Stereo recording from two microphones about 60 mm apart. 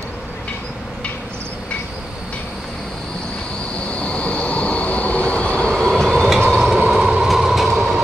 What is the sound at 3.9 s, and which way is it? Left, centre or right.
Train, centre.